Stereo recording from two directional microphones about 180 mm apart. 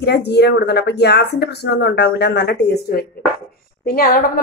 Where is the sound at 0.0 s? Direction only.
65° left (ahead or behind).